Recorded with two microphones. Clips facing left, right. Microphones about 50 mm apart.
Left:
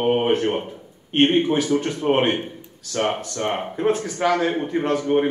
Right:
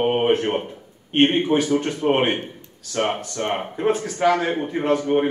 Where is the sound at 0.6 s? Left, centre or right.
Centre.